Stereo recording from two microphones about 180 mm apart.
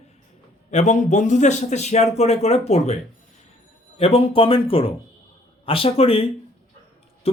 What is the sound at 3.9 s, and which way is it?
A man's voice, 35° left (ahead or behind).